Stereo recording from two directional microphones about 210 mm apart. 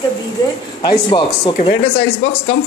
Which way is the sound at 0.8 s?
20° left (ahead or behind).